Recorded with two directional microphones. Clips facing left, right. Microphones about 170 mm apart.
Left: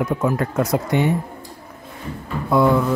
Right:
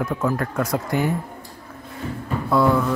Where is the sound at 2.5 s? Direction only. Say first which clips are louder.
Left 2 dB; 15° left (ahead or behind).